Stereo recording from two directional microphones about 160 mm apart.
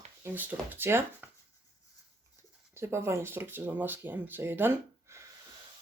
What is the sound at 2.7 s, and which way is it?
Speech, 15° right (ahead or behind).